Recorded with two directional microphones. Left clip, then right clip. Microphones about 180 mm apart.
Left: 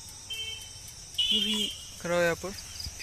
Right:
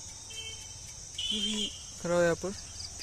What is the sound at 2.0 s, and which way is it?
Speech, 30° right (ahead or behind).